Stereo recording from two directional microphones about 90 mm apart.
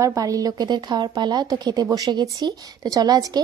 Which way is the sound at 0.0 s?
40° right (ahead or behind).